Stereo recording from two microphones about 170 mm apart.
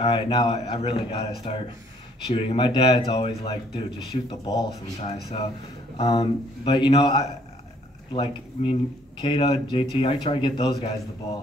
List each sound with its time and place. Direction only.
0.0 s speech: 30° left (ahead or behind)
5.9 s speech: 25° left (ahead or behind)